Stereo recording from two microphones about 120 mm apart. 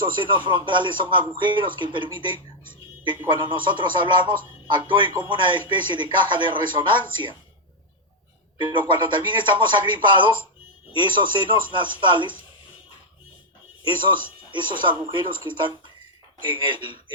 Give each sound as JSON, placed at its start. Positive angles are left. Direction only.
{"t": 0.2, "sound": "speech", "side_deg": -40}
{"t": 3.2, "sound": "speech", "side_deg": -40}
{"t": 8.5, "sound": "speech", "side_deg": -40}
{"t": 13.8, "sound": "speech", "side_deg": -40}